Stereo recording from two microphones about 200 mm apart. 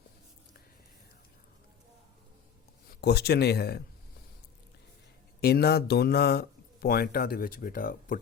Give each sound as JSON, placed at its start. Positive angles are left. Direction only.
{"t": 2.9, "sound": "speech", "side_deg": 55}
{"t": 5.4, "sound": "speech", "side_deg": 55}